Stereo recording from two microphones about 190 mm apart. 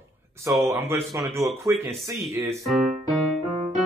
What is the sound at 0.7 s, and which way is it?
Speech, 10° right (ahead or behind).